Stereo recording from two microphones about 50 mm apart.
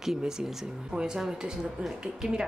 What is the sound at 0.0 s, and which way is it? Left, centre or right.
Speech, centre.